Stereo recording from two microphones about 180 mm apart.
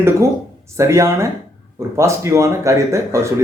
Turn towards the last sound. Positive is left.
turn(degrees=-15)  # may be behind; listen again after turning